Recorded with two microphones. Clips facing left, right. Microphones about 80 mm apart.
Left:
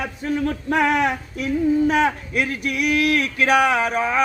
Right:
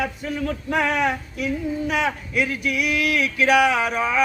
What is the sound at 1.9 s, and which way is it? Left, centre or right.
Speech, left.